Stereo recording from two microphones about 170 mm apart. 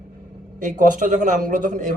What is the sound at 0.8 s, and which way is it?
Speech, 50° right (ahead or behind).